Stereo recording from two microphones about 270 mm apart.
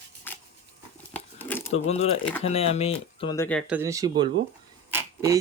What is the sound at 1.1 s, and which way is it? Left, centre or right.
Crumpling, centre.